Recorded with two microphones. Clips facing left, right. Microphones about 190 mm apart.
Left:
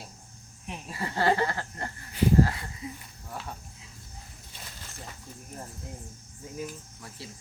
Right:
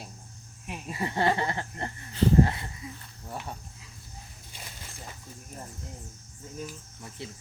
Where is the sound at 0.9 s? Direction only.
20° right (ahead or behind).